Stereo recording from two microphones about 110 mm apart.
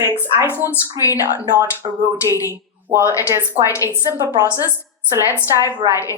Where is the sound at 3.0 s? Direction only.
30° left (ahead or behind).